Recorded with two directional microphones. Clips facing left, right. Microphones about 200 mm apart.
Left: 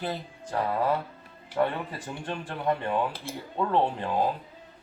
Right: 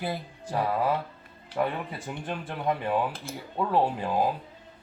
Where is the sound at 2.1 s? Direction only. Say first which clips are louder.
Right 1 dB; 10° right (ahead or behind).